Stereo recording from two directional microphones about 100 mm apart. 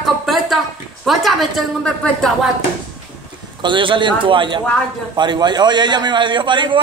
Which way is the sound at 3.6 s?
55° right (ahead or behind).